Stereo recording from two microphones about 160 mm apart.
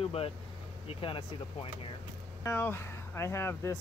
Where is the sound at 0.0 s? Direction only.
35° left (ahead or behind).